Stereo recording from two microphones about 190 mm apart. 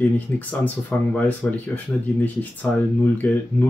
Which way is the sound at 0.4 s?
10° left (ahead or behind).